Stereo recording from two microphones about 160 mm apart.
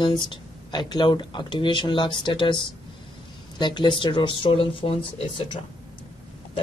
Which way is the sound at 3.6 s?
30° left (ahead or behind).